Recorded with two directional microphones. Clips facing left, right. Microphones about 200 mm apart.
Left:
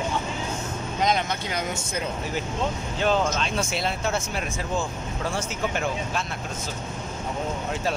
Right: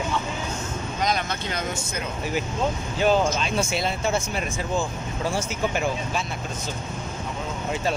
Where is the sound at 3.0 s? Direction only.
5° right (ahead or behind).